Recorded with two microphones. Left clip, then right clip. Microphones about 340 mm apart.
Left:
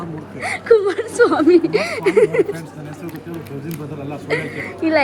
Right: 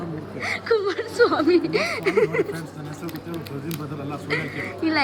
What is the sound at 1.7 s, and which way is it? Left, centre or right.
Speech, centre.